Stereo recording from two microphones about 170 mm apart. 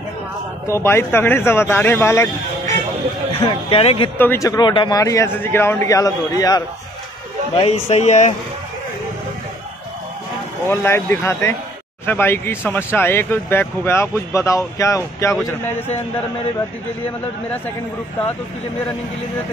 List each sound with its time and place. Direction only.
0.7 s speech: 15° left (ahead or behind)
3.3 s speech: 35° left (ahead or behind)
4.2 s speech: 15° left (ahead or behind)
7.5 s speech: 35° left (ahead or behind)
10.7 s speech: 15° left (ahead or behind)